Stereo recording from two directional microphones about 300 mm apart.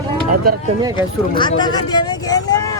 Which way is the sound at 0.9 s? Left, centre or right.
Centre.